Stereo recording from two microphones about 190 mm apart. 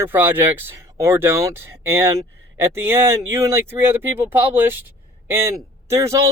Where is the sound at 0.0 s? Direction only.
10° right (ahead or behind).